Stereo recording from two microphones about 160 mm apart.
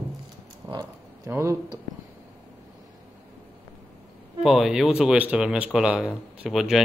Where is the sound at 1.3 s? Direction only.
15° right (ahead or behind).